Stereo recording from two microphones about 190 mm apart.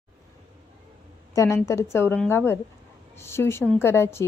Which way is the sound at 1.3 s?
15° left (ahead or behind).